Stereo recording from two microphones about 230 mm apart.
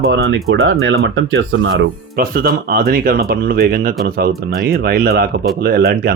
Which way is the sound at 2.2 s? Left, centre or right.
Right.